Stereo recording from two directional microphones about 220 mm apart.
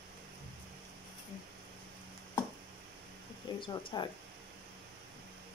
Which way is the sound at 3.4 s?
20° left (ahead or behind).